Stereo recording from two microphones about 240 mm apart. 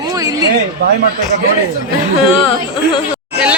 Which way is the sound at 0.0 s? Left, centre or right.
Centre.